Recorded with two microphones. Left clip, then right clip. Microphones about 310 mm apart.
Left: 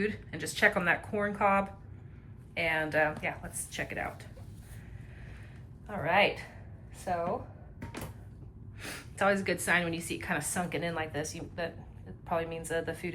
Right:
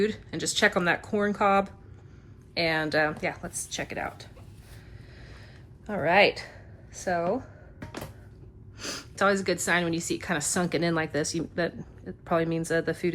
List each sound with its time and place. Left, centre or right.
0.0 s a woman's voice: centre
5.8 s a woman's voice: centre
8.8 s a woman's voice: centre